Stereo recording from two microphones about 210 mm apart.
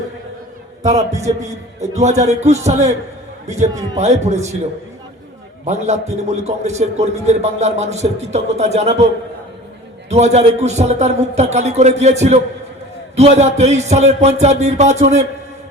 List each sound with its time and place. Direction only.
0.8 s a man's voice: 35° right (ahead or behind)
5.6 s a man's voice: 30° right (ahead or behind)
10.1 s a man's voice: 30° right (ahead or behind)